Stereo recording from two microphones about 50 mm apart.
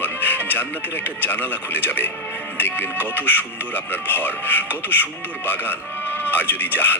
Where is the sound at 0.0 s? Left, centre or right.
Left.